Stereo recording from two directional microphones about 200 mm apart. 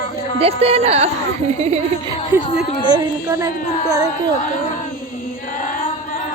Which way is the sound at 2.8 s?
20° right (ahead or behind).